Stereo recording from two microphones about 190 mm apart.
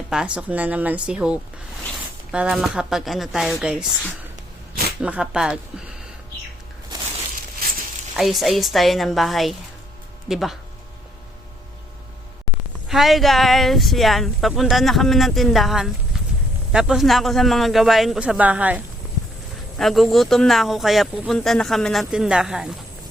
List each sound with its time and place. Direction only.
0.1 s speech: 5° right (ahead or behind)
4.9 s speech: 5° right (ahead or behind)
8.1 s speech: centre (ahead or behind)
12.9 s speech: centre (ahead or behind)
19.8 s speech: centre (ahead or behind)